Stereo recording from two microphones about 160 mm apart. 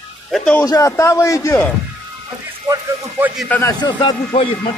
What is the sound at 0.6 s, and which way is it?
A man's voice, 20° left (ahead or behind).